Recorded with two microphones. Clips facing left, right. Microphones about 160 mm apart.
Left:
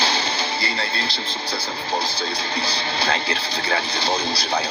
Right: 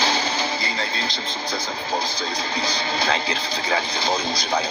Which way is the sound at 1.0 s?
35° left (ahead or behind).